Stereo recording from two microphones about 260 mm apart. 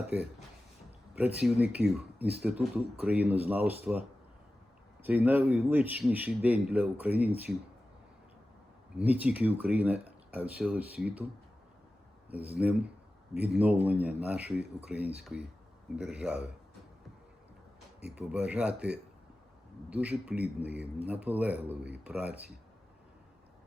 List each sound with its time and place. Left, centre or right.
0.1 s a man's voice: centre
5.0 s a man's voice: centre
9.0 s speech: centre
12.3 s speech: centre
18.0 s speech: centre